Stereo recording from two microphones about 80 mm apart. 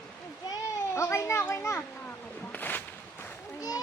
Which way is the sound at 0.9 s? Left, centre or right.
Left.